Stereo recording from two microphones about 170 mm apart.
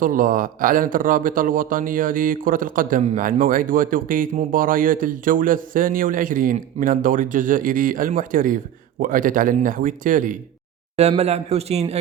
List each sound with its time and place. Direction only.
0.0 s a man's voice: 55° right (ahead or behind)
11.2 s a man's voice: 40° right (ahead or behind)